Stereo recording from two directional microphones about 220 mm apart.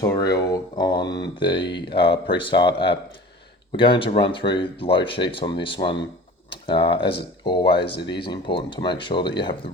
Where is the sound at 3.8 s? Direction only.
25° left (ahead or behind).